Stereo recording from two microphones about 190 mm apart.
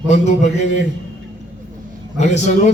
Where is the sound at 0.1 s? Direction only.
40° left (ahead or behind).